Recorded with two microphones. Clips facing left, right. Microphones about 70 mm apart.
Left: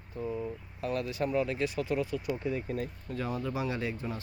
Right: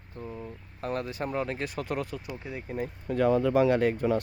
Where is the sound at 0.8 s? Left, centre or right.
Right.